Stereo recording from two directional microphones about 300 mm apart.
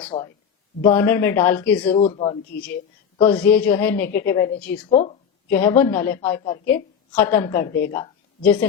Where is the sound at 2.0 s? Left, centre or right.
Centre.